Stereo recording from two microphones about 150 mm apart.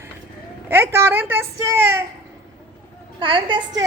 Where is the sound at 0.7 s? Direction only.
15° right (ahead or behind).